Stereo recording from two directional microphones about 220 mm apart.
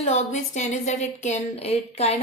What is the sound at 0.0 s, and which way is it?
Speech, 30° left (ahead or behind).